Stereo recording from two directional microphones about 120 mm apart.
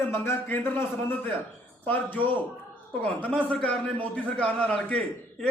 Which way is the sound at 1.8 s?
15° left (ahead or behind).